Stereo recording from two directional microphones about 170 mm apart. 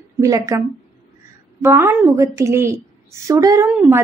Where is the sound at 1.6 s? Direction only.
15° right (ahead or behind).